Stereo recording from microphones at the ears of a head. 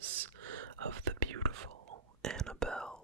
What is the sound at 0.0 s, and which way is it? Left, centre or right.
Whispering, right.